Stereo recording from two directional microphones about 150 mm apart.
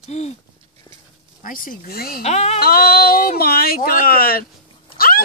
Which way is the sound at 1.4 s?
65° left (ahead or behind).